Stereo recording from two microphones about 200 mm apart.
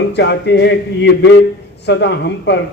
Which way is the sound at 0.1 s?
60° left (ahead or behind).